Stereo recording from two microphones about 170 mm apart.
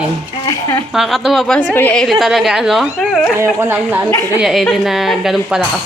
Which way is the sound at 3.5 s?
15° right (ahead or behind).